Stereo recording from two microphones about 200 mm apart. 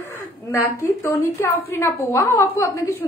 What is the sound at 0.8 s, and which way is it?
A woman's voice, 15° left (ahead or behind).